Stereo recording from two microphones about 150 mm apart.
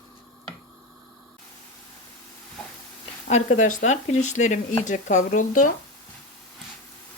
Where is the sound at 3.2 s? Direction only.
55° left (ahead or behind).